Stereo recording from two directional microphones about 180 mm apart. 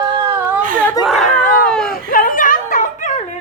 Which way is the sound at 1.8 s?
50° left (ahead or behind).